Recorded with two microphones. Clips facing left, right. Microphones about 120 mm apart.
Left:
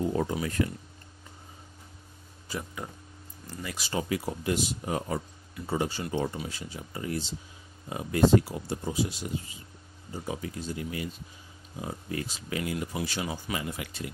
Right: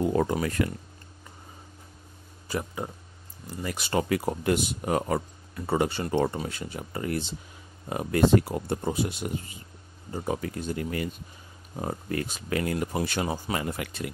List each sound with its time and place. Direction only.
0.0 s speech: 65° right (ahead or behind)
2.8 s speech: 25° right (ahead or behind)
3.6 s speech: 55° right (ahead or behind)
6.3 s speech: 55° right (ahead or behind)